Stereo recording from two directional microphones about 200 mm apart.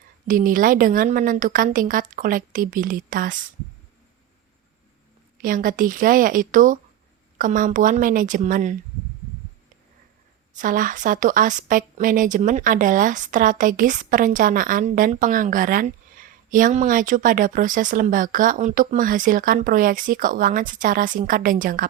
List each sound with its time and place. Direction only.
0.3 s a woman's voice: 45° right (ahead or behind)
5.4 s a woman's voice: 45° right (ahead or behind)
10.6 s speech: 40° right (ahead or behind)